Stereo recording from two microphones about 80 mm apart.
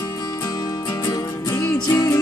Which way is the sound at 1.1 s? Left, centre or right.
Left.